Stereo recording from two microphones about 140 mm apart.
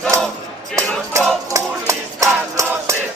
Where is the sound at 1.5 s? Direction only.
20° right (ahead or behind).